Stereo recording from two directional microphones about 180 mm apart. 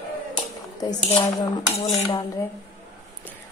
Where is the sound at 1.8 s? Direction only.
35° left (ahead or behind).